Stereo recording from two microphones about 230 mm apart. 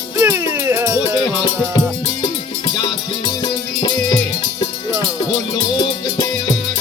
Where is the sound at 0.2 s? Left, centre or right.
Centre.